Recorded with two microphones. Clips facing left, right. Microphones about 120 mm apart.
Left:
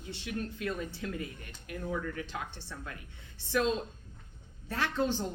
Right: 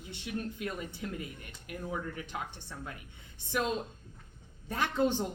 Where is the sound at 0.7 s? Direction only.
15° right (ahead or behind).